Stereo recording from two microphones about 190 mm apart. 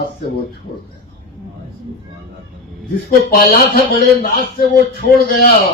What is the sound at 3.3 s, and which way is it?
Speech, 50° left (ahead or behind).